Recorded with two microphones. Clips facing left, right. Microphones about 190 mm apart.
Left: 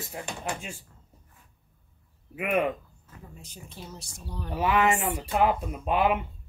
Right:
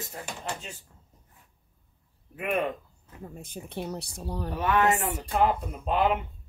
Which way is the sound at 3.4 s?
60° right (ahead or behind).